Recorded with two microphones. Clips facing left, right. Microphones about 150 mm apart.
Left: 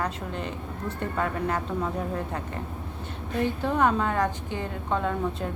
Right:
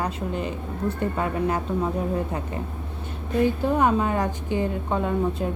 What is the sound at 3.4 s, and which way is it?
A woman's voice, 10° right (ahead or behind).